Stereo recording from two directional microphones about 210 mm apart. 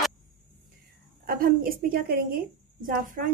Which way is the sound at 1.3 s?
45° right (ahead or behind).